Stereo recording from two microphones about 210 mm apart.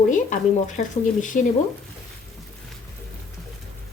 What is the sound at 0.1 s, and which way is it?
Speech, 40° left (ahead or behind).